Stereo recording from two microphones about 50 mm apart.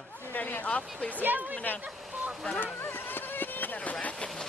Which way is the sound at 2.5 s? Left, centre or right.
Left.